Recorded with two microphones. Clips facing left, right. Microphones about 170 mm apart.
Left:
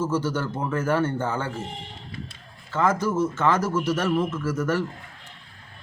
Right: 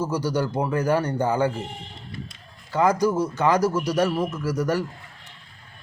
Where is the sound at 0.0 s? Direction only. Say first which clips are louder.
Right 1 dB; 15° right (ahead or behind).